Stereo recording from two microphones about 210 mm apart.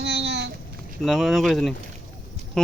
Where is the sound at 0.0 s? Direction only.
55° right (ahead or behind).